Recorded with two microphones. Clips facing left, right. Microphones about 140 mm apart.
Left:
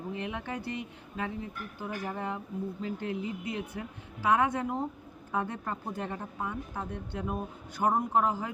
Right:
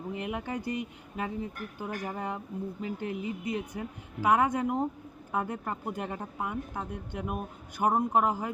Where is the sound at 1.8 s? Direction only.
15° right (ahead or behind).